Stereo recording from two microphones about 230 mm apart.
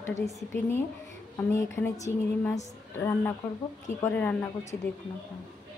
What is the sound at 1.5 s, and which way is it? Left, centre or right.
Speech, centre.